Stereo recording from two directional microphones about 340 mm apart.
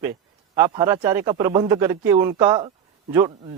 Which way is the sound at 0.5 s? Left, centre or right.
Centre.